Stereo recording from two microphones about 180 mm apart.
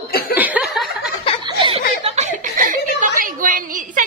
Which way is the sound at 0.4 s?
10° right (ahead or behind).